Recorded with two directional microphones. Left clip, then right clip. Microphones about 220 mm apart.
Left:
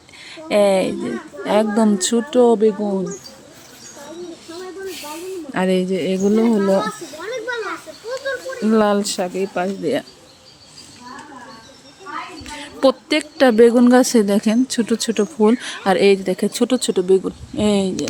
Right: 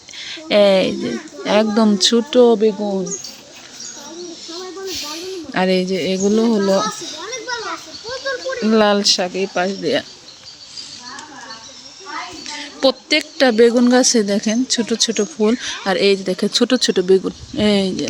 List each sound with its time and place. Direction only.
0.2 s a child's voice: 5° right (ahead or behind); by 3.0 s 10° left (ahead or behind)
5.5 s a woman's voice: 5° left (ahead or behind)
7.2 s a sound: 40° right (ahead or behind)
8.6 s speech: centre (ahead or behind)
12.8 s a woman's voice: 25° left (ahead or behind); by 17.9 s centre (ahead or behind)